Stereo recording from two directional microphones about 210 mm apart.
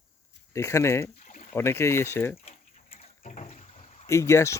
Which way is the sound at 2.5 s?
30° left (ahead or behind).